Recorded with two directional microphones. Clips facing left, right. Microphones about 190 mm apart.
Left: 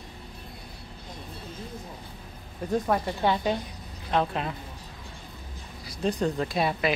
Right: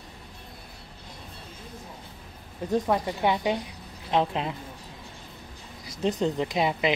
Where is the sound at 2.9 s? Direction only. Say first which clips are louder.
Left 1 dB; 15° right (ahead or behind).